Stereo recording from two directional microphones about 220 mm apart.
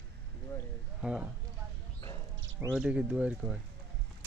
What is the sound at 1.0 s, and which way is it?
Speech, 5° right (ahead or behind).